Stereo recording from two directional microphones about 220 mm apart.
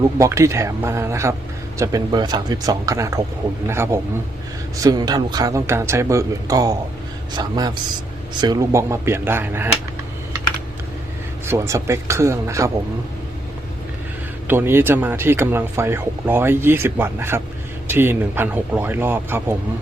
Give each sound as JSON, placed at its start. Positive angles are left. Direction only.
{"t": 0.2, "sound": "speech", "side_deg": -15}
{"t": 11.4, "sound": "speech", "side_deg": -10}
{"t": 14.4, "sound": "speech", "side_deg": -10}